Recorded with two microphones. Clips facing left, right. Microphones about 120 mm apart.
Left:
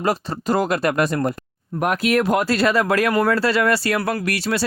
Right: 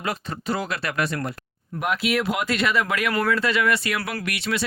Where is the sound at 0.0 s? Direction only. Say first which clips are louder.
Left 7 dB; 40° left (ahead or behind).